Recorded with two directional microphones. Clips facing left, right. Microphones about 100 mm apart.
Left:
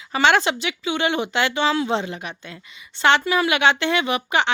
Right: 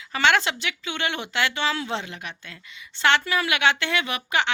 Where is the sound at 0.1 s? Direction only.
20° left (ahead or behind).